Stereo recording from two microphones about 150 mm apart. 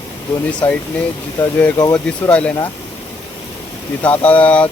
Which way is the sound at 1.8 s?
25° left (ahead or behind).